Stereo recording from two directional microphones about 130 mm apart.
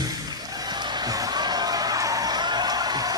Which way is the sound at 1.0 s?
30° right (ahead or behind).